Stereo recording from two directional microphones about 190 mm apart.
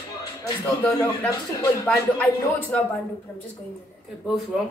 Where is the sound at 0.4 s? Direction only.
15° left (ahead or behind).